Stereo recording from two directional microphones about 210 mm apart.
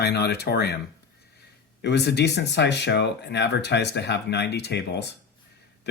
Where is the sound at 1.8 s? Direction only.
50° left (ahead or behind).